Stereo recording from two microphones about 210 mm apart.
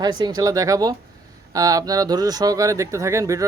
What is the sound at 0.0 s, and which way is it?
Speech, 20° right (ahead or behind).